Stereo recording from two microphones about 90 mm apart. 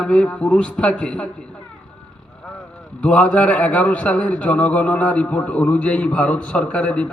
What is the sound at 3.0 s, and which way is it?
A man's voice, 15° left (ahead or behind).